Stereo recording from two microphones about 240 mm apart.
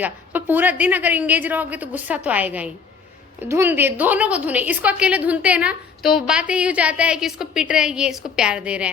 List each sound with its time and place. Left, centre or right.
0.0 s a woman's voice: centre